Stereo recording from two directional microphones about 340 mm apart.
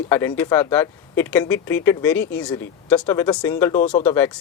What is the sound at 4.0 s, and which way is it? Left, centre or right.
Speech, centre.